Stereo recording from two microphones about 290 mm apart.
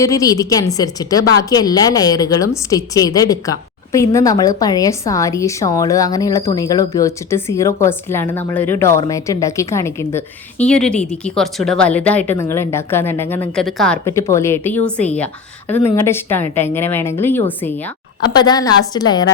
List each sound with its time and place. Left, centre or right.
0.0 s a woman's voice: centre